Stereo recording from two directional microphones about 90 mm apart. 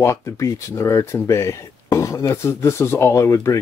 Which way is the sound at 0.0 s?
35° left (ahead or behind).